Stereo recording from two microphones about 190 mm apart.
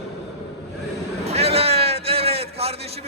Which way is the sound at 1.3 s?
35° right (ahead or behind).